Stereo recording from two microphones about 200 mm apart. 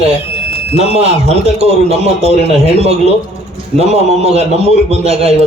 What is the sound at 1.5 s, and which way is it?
Speech, 30° right (ahead or behind).